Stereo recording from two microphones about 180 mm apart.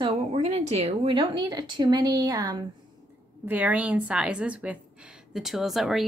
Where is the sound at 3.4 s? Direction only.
10° right (ahead or behind).